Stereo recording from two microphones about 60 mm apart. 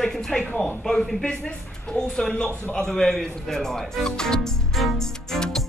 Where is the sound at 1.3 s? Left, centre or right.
Centre.